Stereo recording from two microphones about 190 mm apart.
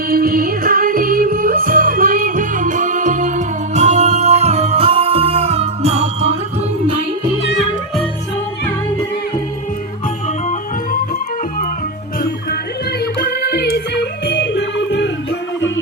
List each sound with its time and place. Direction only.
0.1 s music: 50° right (ahead or behind); by 6.3 s 35° right (ahead or behind)
13.1 s music: 55° left (ahead or behind); by 15.1 s 70° left (ahead or behind)